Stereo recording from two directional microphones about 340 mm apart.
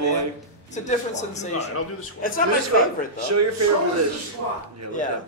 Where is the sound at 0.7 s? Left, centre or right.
Left.